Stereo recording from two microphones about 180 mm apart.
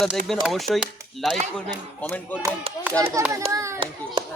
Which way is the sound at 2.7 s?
30° right (ahead or behind).